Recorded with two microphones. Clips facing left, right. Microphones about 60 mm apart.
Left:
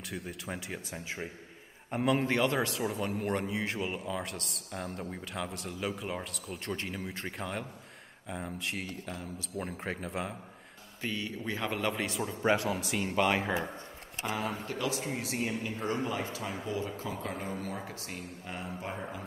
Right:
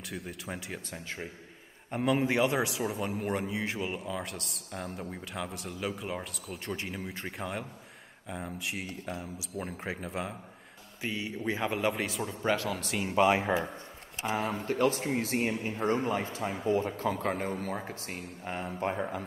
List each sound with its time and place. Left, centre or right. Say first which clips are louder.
0.1 s a man's voice: even; centre
8.8 s speech: right 2 dB; right
9.6 s a man's voice: even; centre
11.0 s a man's voice: right 1 dB; centre
12.4 s speech: left 2 dB; centre
12.6 s a man's voice: left 1 dB; centre
13.0 s a man's voice: right 4 dB; centre
14.5 s speech: right 6 dB; right